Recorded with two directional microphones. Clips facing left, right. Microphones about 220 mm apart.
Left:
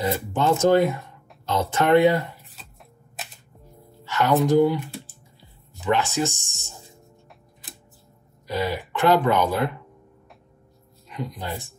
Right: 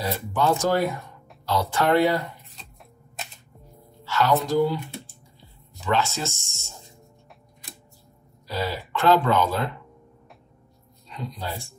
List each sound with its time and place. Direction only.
0.0 s speech: 20° left (ahead or behind)
4.0 s a sound: 15° left (ahead or behind)
4.5 s speech: 20° left (ahead or behind)
8.5 s speech: 15° left (ahead or behind)
11.1 s speech: 20° left (ahead or behind)